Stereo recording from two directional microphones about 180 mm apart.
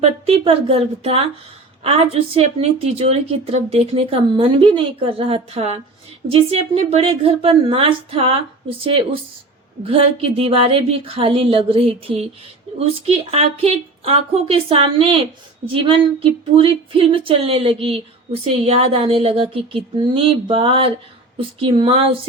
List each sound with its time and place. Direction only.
0.0 s a woman's voice: 35° right (ahead or behind)